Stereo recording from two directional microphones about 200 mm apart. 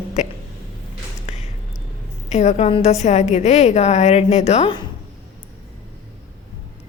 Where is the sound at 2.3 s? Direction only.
35° left (ahead or behind).